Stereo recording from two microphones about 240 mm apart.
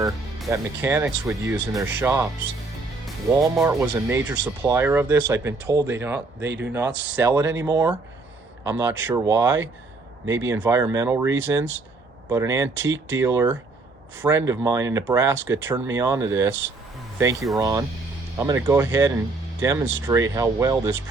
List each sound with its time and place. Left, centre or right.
0.5 s speech: centre
3.2 s speech: centre
6.4 s speech: right
6.7 s speech: centre
10.2 s speech: right
10.5 s speech: centre
17.6 s speech: centre